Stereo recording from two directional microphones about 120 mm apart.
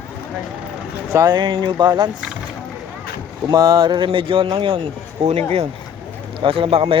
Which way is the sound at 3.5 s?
35° right (ahead or behind).